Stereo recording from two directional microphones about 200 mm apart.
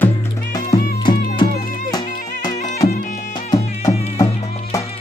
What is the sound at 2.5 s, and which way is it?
Music, 35° left (ahead or behind).